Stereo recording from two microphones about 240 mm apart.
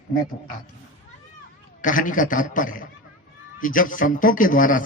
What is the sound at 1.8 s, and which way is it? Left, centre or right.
A man's voice, left.